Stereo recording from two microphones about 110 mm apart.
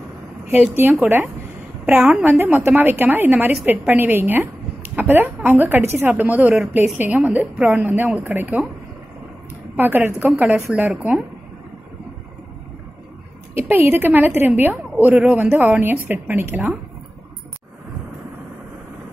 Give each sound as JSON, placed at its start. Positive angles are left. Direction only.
{"t": 1.0, "sound": "a woman's voice", "side_deg": -15}
{"t": 9.8, "sound": "a woman's voice", "side_deg": -20}
{"t": 13.6, "sound": "a woman's voice", "side_deg": -20}